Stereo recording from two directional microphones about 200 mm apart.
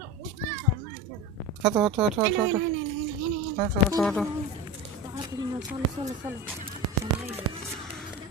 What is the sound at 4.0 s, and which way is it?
Music, 5° left (ahead or behind).